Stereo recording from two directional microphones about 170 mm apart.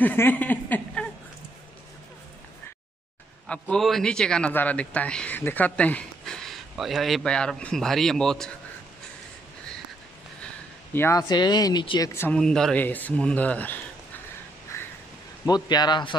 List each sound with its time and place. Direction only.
0.0 s a sound: 10° left (ahead or behind)
3.4 s speech: 5° left (ahead or behind)
10.4 s speech: 10° left (ahead or behind)
12.1 s speech: 15° left (ahead or behind)
12.4 s speech: 5° left (ahead or behind)
14.7 s a sound: 15° left (ahead or behind)
15.4 s speech: 25° left (ahead or behind)